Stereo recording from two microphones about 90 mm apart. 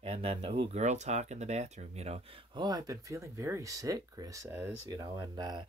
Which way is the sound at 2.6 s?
45° right (ahead or behind).